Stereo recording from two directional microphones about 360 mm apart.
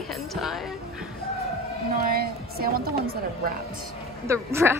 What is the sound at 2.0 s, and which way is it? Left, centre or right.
A woman's voice, right.